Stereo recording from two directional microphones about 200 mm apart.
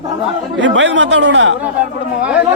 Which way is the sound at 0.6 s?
65° right (ahead or behind).